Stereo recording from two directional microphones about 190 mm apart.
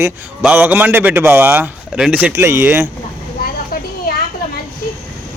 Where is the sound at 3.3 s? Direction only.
50° left (ahead or behind).